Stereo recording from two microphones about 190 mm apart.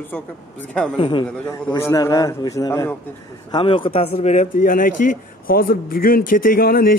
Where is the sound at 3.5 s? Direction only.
25° left (ahead or behind); by 7.0 s 50° left (ahead or behind).